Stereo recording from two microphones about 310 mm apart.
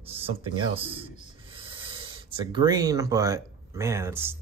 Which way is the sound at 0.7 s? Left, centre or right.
Centre.